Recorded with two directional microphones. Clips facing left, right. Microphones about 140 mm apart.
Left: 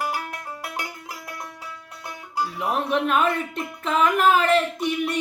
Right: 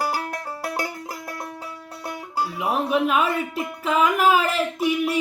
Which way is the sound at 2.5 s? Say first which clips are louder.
Right 2 dB; 5° right (ahead or behind).